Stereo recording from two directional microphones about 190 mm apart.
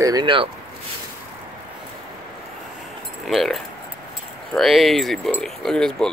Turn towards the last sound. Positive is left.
turn(degrees=5)  # may be behind; listen again after turning